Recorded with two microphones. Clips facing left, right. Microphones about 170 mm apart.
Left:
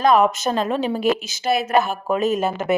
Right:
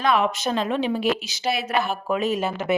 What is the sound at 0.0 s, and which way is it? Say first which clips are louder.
A woman's voice: left 5 dB; 45° left (ahead or behind).